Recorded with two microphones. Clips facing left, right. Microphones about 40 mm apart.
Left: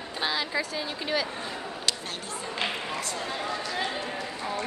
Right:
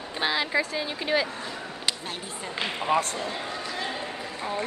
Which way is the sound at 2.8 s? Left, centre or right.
Right.